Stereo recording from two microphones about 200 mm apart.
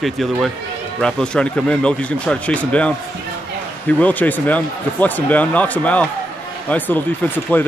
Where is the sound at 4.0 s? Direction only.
10° left (ahead or behind).